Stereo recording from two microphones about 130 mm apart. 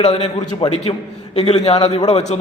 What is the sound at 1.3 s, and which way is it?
A man's voice, 50° left (ahead or behind).